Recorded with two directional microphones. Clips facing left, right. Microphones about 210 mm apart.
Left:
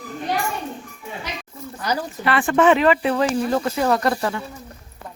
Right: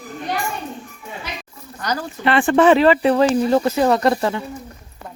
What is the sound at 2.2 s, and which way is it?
Speech, 30° right (ahead or behind).